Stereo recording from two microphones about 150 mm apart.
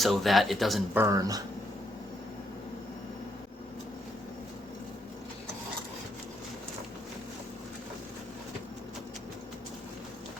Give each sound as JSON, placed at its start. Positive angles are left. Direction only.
{"t": 0.0, "sound": "speech", "side_deg": 0}
{"t": 0.9, "sound": "speech", "side_deg": -20}